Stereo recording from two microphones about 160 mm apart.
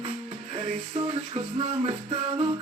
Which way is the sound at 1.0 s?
35° right (ahead or behind).